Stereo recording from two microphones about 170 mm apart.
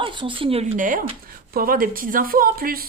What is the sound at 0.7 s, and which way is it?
Speech, 50° right (ahead or behind).